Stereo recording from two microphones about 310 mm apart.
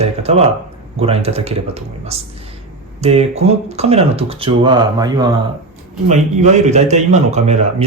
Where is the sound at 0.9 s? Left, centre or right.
Centre.